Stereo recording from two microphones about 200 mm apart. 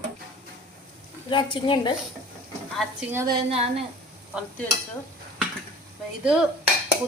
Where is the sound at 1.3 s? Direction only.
25° left (ahead or behind).